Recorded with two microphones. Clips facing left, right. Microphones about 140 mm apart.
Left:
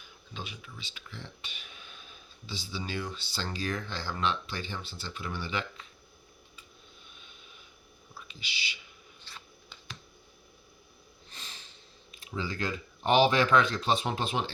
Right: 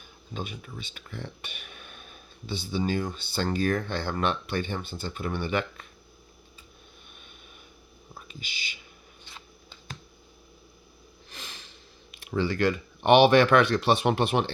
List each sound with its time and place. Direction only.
0.0 s speech: 50° right (ahead or behind)
8.1 s speech: 50° right (ahead or behind)
11.3 s snort: 90° right
12.1 s speech: 70° right (ahead or behind)